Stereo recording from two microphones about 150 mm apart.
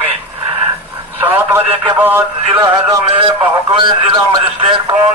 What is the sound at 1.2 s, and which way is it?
Speech, 10° right (ahead or behind).